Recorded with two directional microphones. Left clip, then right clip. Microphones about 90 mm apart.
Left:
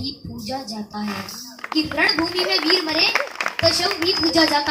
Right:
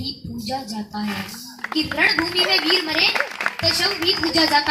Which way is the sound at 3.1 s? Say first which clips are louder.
Left 1 dB; centre (ahead or behind).